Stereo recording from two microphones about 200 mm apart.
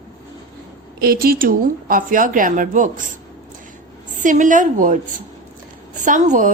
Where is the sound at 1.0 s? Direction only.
50° right (ahead or behind).